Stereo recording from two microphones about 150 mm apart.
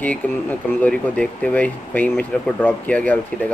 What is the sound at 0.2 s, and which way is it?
Speech, 10° left (ahead or behind).